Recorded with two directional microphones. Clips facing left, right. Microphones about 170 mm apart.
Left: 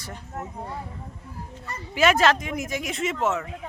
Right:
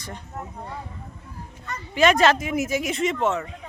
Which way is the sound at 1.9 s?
5° left (ahead or behind).